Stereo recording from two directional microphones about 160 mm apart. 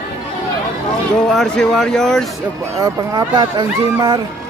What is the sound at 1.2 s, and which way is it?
Speech, 5° left (ahead or behind).